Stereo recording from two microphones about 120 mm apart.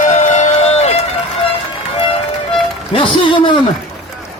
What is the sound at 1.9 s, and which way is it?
Music, 50° left (ahead or behind).